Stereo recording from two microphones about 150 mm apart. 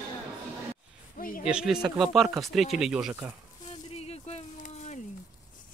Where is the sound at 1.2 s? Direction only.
70° left (ahead or behind).